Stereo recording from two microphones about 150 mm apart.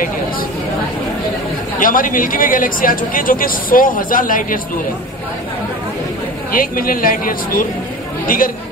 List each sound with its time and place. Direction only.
1.8 s speech: 65° left (ahead or behind)
6.5 s speech: 70° left (ahead or behind)